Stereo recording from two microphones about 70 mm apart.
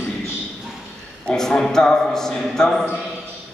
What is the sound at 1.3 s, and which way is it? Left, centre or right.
A man's voice, centre.